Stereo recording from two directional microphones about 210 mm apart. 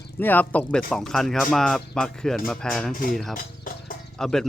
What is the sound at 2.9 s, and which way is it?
Speech, 40° left (ahead or behind).